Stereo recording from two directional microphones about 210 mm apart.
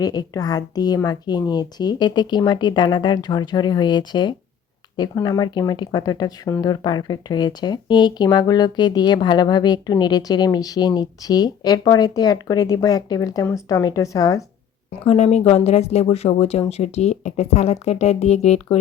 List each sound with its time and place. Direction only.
0.0 s speech: 20° left (ahead or behind)
15.0 s speech: 30° left (ahead or behind)